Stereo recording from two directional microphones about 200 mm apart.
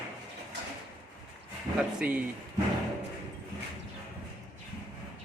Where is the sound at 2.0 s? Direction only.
5° right (ahead or behind).